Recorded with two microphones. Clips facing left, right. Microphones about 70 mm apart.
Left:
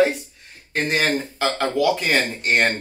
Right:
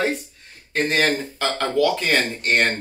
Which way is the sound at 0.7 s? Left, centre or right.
Centre.